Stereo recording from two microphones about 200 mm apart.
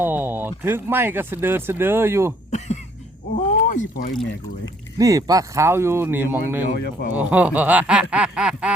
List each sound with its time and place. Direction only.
0.0 s speech: 10° right (ahead or behind)
3.3 s rowboat: 45° left (ahead or behind)
4.1 s quack: centre (ahead or behind)
4.9 s speech: 15° right (ahead or behind)
8.1 s quack: 5° right (ahead or behind)